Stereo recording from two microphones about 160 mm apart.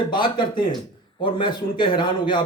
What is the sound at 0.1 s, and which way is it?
A man's voice, 30° left (ahead or behind).